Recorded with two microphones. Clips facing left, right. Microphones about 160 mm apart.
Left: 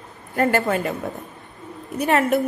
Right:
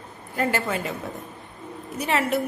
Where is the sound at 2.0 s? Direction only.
50° left (ahead or behind).